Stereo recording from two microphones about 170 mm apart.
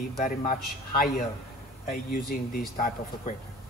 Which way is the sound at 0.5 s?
55° left (ahead or behind).